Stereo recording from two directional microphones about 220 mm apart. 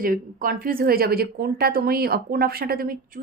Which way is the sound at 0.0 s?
40° right (ahead or behind).